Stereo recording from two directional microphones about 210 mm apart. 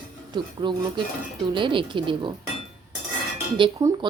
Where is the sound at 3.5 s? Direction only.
25° right (ahead or behind).